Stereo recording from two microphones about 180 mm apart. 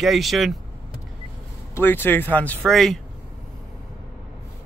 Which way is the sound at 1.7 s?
10° left (ahead or behind).